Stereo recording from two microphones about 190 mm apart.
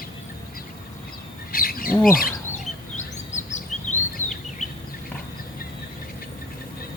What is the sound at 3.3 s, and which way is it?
Bird vocalization, 40° left (ahead or behind).